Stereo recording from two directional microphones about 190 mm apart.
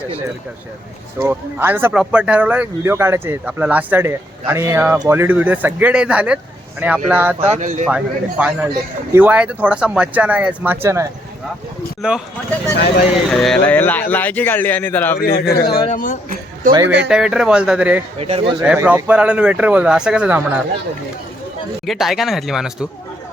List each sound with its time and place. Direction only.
1.2 s speech: 10° right (ahead or behind)
7.3 s speech: 35° right (ahead or behind)
7.9 s speech: 5° right (ahead or behind)
12.7 s speech: 60° left (ahead or behind)
13.1 s speech: centre (ahead or behind)
15.2 s speech: 55° left (ahead or behind)
17.1 s speech: 5° right (ahead or behind)
18.2 s speech: 30° right (ahead or behind)
18.6 s speech: 5° right (ahead or behind)
21.8 s speech: centre (ahead or behind)